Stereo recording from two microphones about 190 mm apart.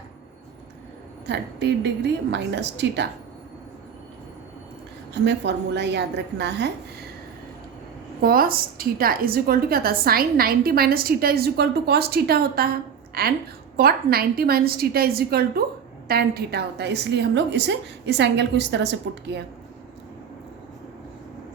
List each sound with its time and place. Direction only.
1.3 s a woman's voice: 65° right (ahead or behind)
5.2 s a woman's voice: 65° right (ahead or behind)
8.2 s a woman's voice: 50° right (ahead or behind)